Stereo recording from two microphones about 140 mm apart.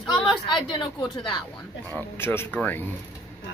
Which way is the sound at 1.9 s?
15° left (ahead or behind).